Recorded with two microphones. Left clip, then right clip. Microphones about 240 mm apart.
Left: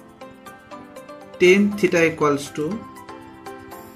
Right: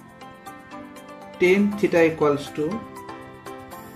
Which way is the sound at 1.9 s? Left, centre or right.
Left.